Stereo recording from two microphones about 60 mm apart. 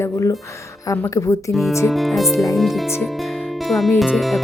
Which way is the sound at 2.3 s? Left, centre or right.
Left.